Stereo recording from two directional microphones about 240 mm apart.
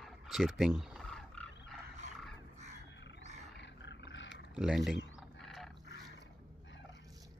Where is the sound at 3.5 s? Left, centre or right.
Left.